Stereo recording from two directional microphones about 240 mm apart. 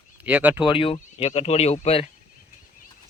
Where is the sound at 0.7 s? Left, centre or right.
Left.